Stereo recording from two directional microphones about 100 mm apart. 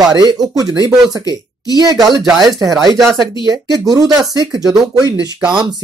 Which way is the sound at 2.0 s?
40° right (ahead or behind).